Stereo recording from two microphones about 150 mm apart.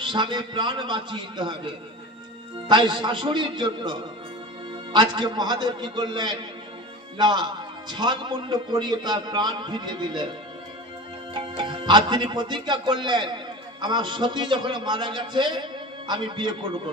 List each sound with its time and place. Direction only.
0.0 s a man's voice: 30° right (ahead or behind)
2.7 s a man's voice: 30° right (ahead or behind)
11.3 s a man's voice: 35° right (ahead or behind)